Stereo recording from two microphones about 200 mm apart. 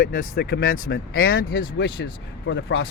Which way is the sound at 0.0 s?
55° left (ahead or behind).